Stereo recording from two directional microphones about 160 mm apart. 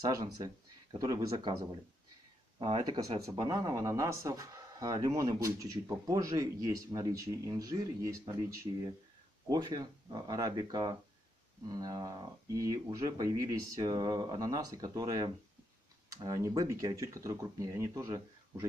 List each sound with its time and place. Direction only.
0.0 s speech: 25° right (ahead or behind)
2.6 s speech: 30° right (ahead or behind)